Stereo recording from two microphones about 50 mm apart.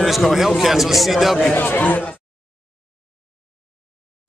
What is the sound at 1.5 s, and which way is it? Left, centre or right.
Speech, left.